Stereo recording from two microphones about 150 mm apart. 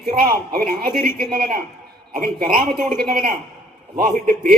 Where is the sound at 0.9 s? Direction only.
80° right; by 4.5 s 60° right (ahead or behind).